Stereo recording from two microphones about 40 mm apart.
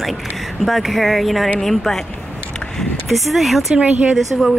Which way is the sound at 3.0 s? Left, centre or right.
Centre.